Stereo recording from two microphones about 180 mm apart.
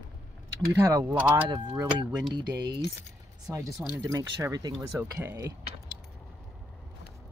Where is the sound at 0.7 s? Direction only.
20° right (ahead or behind).